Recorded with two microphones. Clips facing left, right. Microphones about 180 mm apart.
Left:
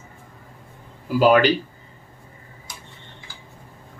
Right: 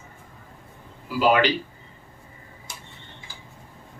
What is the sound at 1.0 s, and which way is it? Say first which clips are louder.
Speech: left 4 dB; 45° left (ahead or behind).